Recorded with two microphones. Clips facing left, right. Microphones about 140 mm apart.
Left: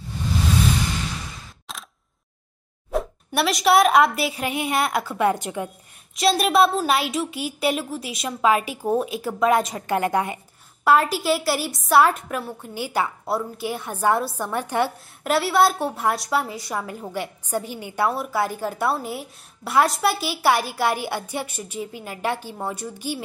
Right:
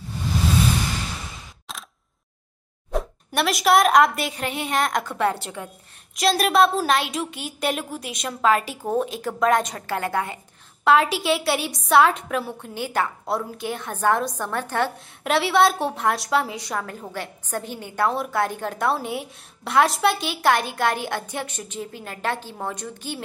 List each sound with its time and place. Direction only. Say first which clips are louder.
1.7 s single-lens reflex camera: even; centre (ahead or behind)
2.9 s a woman's voice: left 2 dB; centre (ahead or behind)
6.1 s a woman's voice: left 1 dB; centre (ahead or behind)
9.8 s a woman's voice: left 3 dB; 20° left (ahead or behind)
10.8 s a woman's voice: even; centre (ahead or behind)
15.2 s a woman's voice: even; centre (ahead or behind)